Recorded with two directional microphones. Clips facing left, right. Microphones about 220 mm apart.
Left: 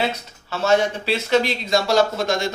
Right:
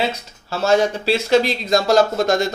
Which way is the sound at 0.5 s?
35° right (ahead or behind).